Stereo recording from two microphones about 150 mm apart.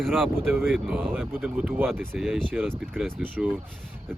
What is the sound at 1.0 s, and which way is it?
Speech, 10° right (ahead or behind).